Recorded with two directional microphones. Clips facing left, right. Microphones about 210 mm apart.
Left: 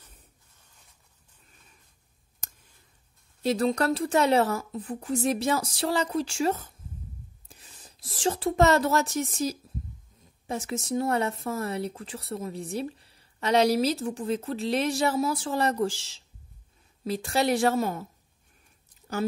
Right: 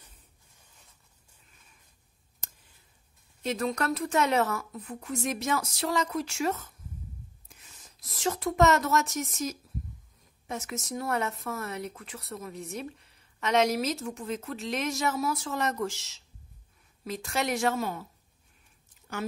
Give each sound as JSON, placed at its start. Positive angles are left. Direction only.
{"t": 3.4, "sound": "speech", "side_deg": 30}